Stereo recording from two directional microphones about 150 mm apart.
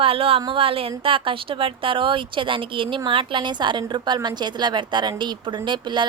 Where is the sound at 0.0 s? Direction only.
40° right (ahead or behind).